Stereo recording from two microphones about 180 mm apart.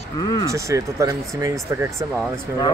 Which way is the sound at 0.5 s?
15° right (ahead or behind).